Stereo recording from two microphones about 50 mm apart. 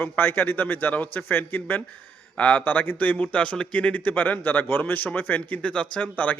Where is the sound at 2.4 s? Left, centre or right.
Left.